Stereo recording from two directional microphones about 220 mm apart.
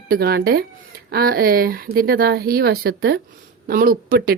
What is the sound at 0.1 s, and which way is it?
Speech, 45° right (ahead or behind).